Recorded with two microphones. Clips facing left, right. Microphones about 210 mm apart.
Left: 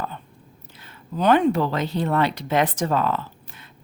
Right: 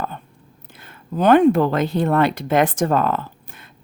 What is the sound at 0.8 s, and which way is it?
Speech, 50° right (ahead or behind).